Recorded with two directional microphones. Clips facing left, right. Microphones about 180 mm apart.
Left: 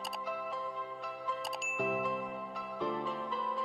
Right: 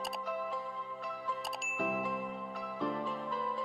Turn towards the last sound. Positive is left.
turn(degrees=0)  # may be behind; listen again after turning